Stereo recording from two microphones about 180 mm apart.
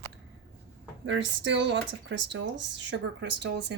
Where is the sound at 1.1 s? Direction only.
90° right; by 3.7 s 75° right (ahead or behind).